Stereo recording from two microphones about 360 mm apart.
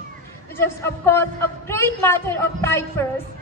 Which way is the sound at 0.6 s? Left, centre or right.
Centre.